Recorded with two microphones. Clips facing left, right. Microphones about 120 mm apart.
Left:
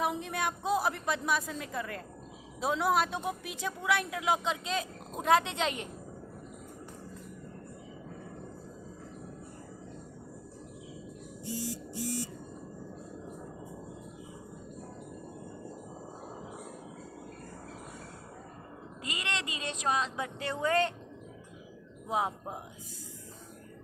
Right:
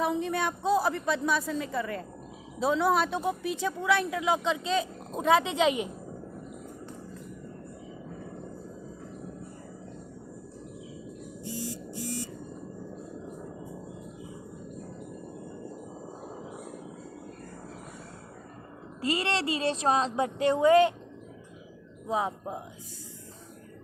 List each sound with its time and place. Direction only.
0.0 s a woman's voice: centre (ahead or behind)
11.6 s buzzer: 10° left (ahead or behind)
19.0 s a sound: 35° right (ahead or behind)
20.4 s speech: 15° right (ahead or behind)